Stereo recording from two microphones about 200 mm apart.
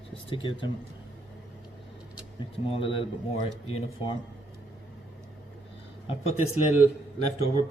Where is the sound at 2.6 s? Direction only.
25° left (ahead or behind).